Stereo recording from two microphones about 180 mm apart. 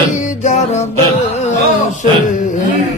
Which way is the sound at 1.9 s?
45° left (ahead or behind).